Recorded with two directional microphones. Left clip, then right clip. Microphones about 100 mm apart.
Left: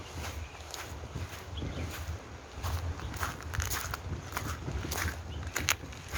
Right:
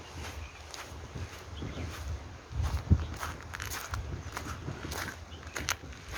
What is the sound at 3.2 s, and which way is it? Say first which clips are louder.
Biting: left 2 dB; 50° left (ahead or behind).